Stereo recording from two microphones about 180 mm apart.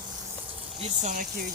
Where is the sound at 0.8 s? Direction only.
40° right (ahead or behind).